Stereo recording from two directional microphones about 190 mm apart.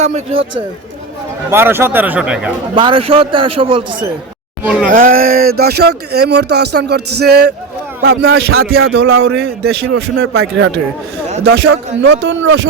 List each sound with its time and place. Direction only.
0.0 s speech: 35° right (ahead or behind)
1.5 s speech: 10° right (ahead or behind)
2.7 s a man's voice: 25° right (ahead or behind)
4.6 s speech: 5° right (ahead or behind)
4.9 s speech: 45° right (ahead or behind)
8.0 s a man's voice: 90° right
8.8 s speech: 65° right (ahead or behind); by 10.8 s 90° right
11.4 s speech: 65° right (ahead or behind)
12.0 s speech: 80° right